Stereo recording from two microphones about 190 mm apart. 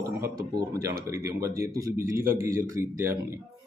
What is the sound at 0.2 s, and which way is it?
Speech, 20° right (ahead or behind).